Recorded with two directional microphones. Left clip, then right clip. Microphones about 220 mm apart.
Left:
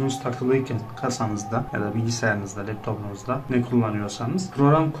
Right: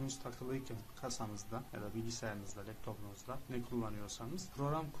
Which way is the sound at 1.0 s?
45° right (ahead or behind).